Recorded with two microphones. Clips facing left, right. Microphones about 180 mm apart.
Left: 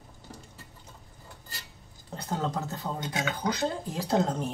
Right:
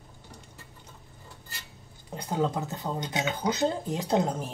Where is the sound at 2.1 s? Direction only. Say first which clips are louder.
Right 3 dB; 15° right (ahead or behind).